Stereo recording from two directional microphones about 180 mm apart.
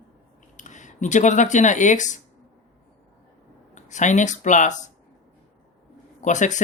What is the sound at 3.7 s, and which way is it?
Speech, 40° left (ahead or behind).